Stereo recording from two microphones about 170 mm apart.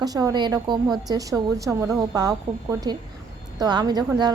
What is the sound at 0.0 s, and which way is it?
A woman's voice, 20° right (ahead or behind).